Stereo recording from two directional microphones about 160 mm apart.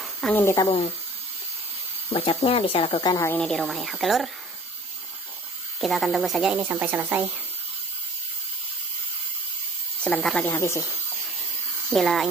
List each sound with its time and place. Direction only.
0.2 s speech: 10° left (ahead or behind)
2.1 s speech: 35° left (ahead or behind)
3.3 s speech: 5° left (ahead or behind)
5.8 s speech: centre (ahead or behind)
10.0 s speech: 5° left (ahead or behind)
11.9 s speech: centre (ahead or behind)